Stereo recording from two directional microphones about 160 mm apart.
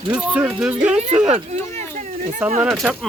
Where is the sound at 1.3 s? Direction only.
40° right (ahead or behind).